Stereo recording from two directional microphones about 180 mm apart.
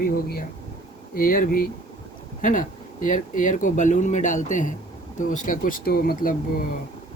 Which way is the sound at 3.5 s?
45° left (ahead or behind).